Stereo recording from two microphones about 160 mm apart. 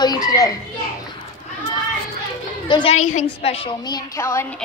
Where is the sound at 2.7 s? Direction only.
30° left (ahead or behind).